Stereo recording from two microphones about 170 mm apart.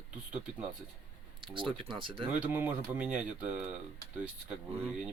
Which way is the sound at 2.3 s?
10° right (ahead or behind).